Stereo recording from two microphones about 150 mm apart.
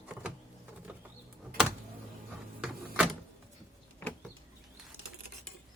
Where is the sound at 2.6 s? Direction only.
5° right (ahead or behind).